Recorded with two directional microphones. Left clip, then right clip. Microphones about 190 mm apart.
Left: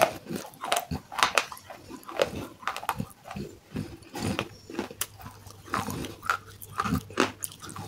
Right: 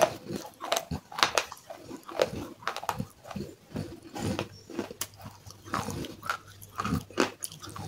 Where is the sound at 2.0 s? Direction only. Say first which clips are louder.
Left 1 dB; 15° left (ahead or behind).